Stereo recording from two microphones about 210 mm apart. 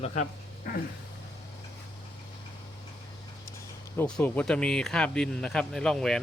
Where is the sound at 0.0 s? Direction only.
35° left (ahead or behind).